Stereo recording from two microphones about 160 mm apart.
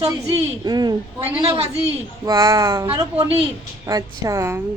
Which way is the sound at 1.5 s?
40° right (ahead or behind).